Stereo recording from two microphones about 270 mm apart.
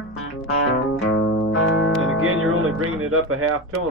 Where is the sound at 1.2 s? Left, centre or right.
Left.